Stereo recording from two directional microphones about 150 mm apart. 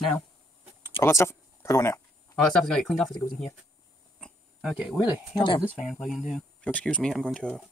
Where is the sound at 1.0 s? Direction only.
20° left (ahead or behind).